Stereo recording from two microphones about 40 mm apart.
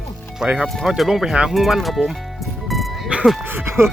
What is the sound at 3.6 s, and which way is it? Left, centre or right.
Speech, right.